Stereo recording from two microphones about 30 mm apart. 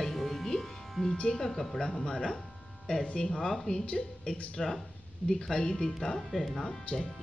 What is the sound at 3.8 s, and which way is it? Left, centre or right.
Speech, left.